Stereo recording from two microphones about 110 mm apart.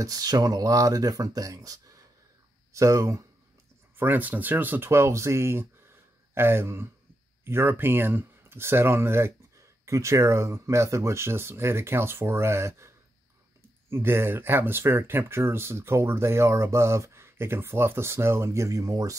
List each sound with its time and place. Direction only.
0.0 s speech: 35° right (ahead or behind)
4.0 s speech: 15° right (ahead or behind)